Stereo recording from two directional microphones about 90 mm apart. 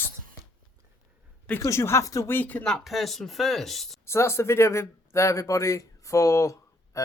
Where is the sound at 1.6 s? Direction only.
30° left (ahead or behind).